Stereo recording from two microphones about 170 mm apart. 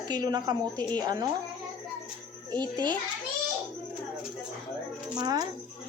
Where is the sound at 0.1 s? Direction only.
25° right (ahead or behind).